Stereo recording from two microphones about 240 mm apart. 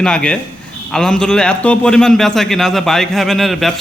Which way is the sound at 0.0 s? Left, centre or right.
Centre.